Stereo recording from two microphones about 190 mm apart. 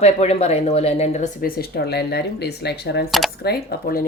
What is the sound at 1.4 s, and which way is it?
Speech, 55° left (ahead or behind).